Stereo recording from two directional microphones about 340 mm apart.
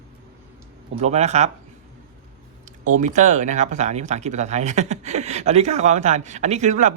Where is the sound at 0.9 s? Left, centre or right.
Centre.